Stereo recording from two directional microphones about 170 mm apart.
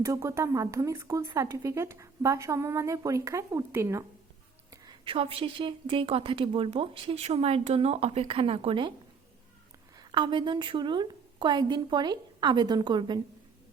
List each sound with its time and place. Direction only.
0.0 s speech: 20° right (ahead or behind)
4.7 s a woman's voice: 25° right (ahead or behind)
10.0 s a woman's voice: 25° right (ahead or behind)